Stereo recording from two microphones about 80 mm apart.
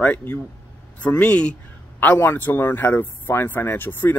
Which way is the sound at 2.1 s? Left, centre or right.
Left.